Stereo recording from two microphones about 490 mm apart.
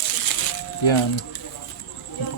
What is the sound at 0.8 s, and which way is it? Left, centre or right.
Speech, left.